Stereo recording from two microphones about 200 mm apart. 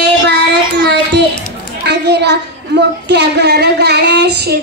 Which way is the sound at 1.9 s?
60° right (ahead or behind).